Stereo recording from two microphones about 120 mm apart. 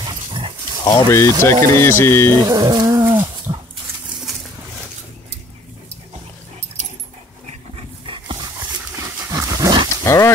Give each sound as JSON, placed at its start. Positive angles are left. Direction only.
{"t": 0.0, "sound": "dog", "side_deg": -40}
{"t": 0.8, "sound": "speech", "side_deg": 25}
{"t": 2.3, "sound": "a sound", "side_deg": -35}
{"t": 3.5, "sound": "dog", "side_deg": -35}
{"t": 7.7, "sound": "dog", "side_deg": -45}
{"t": 8.9, "sound": "dog", "side_deg": -25}
{"t": 10.0, "sound": "dog", "side_deg": 25}